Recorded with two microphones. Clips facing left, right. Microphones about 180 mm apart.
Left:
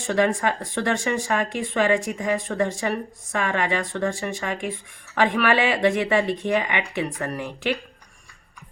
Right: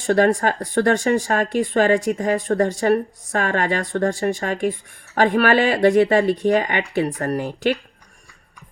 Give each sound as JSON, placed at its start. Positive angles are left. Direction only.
{"t": 0.1, "sound": "speech", "side_deg": -45}